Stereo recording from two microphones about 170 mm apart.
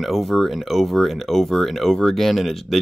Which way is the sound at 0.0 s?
Centre (ahead or behind).